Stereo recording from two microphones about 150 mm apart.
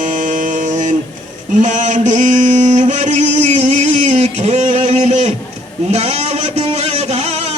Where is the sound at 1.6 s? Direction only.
55° right (ahead or behind).